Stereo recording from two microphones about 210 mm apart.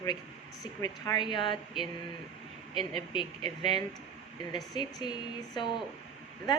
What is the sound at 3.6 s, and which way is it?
A woman's voice, 20° left (ahead or behind).